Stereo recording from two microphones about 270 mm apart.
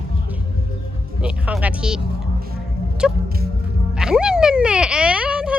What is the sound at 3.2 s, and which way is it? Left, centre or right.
Music, right.